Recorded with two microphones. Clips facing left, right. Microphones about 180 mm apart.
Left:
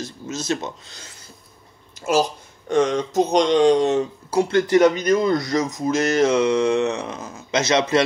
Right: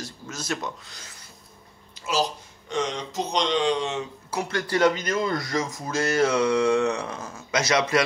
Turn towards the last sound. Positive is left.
turn(degrees=25)  # may be behind; listen again after turning